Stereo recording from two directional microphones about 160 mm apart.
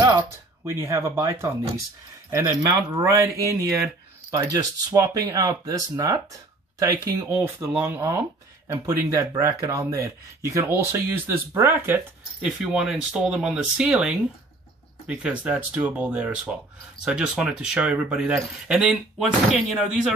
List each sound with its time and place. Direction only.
0.7 s speech: 15° right (ahead or behind)
2.7 s speech: 20° right (ahead or behind); by 20.1 s centre (ahead or behind)